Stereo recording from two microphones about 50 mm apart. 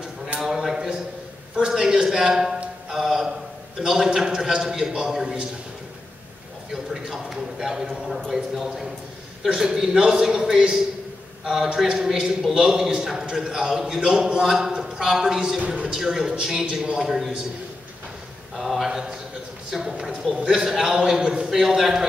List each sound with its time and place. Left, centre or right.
0.4 s a sound: centre
3.8 s a man's voice: centre
6.7 s a man's voice: centre
9.5 s a man's voice: centre
18.6 s a man's voice: centre